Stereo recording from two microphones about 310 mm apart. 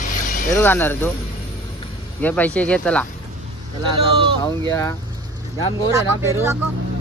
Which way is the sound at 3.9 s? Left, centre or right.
Centre.